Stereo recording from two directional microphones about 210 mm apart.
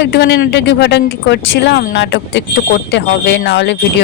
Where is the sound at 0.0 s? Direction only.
55° left (ahead or behind).